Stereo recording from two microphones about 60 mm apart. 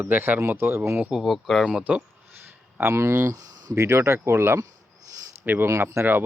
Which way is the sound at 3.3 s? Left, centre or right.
Right.